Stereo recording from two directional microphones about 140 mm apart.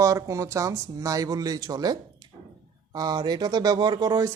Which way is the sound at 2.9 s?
30° right (ahead or behind).